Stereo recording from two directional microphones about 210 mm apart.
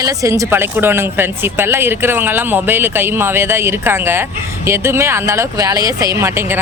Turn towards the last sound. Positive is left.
turn(degrees=-10)  # may be behind; listen again after turning